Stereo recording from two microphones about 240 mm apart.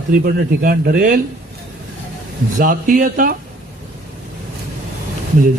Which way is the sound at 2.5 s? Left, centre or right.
Right.